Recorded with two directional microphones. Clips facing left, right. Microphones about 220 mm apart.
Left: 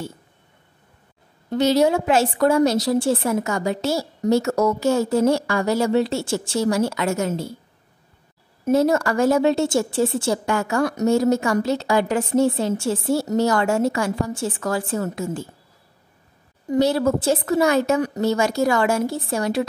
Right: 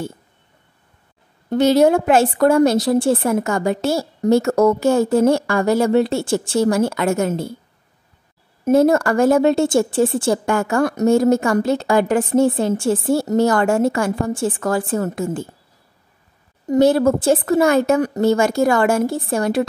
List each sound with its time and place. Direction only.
1.5 s a woman's voice: 50° right (ahead or behind)
8.6 s a woman's voice: 50° right (ahead or behind)
16.6 s a woman's voice: 50° right (ahead or behind)